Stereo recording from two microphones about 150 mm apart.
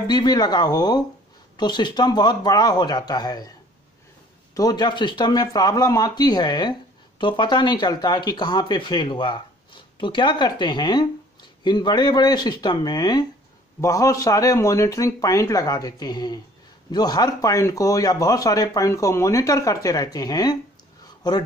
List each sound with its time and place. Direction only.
0.0 s speech: 30° left (ahead or behind)
4.6 s speech: 25° left (ahead or behind)